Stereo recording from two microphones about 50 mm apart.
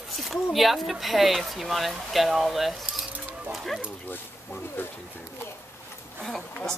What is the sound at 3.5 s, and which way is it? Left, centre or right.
Dog, centre.